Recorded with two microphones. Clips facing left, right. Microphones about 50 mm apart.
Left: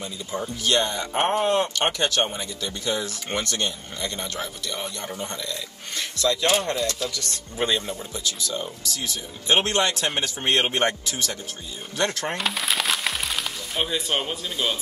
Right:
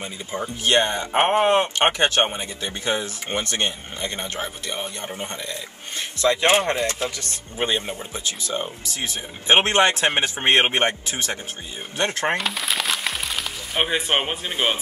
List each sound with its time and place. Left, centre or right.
0.0 s speech: right
12.4 s a sound: centre
13.7 s speech: right